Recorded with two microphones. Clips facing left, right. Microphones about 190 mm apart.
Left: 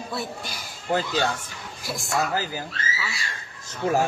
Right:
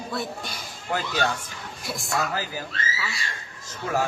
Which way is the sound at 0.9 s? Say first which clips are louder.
Left 2 dB; 25° left (ahead or behind).